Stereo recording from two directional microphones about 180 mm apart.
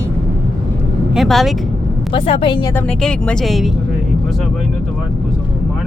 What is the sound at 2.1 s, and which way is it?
Speech, 30° left (ahead or behind).